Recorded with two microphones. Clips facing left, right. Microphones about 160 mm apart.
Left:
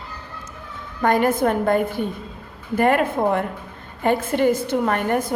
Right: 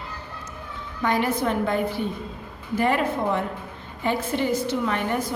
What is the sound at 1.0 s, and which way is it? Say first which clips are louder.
A woman's voice: left 5 dB; 50° left (ahead or behind).